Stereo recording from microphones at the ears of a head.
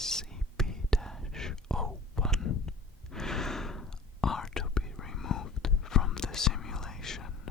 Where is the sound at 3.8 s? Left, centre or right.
Left.